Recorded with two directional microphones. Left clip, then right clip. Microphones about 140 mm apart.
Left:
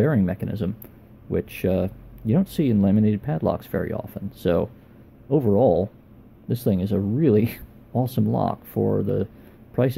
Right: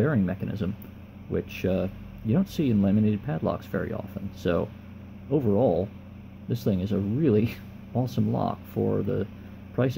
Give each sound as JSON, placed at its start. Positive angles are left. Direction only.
{"t": 0.0, "sound": "speech", "side_deg": 20}